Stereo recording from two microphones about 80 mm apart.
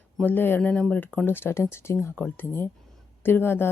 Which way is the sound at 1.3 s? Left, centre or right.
Left.